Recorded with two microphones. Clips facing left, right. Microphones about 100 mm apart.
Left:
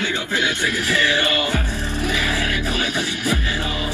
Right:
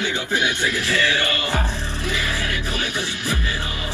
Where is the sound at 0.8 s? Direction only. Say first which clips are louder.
Left 3 dB; 20° left (ahead or behind).